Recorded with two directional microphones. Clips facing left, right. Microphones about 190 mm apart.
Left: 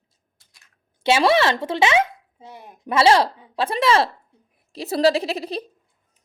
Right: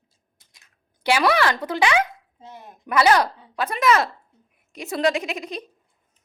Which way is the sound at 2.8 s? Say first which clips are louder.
Left 2 dB; 25° left (ahead or behind).